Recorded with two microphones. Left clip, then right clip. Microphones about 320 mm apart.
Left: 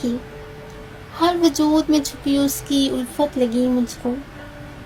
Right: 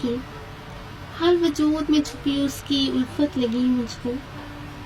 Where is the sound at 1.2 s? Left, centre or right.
Centre.